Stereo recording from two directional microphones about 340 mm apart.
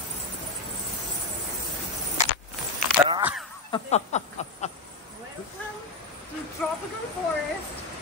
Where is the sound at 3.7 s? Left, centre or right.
Centre.